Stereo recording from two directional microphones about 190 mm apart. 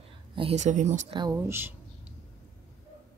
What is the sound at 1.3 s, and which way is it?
Speech, 10° right (ahead or behind).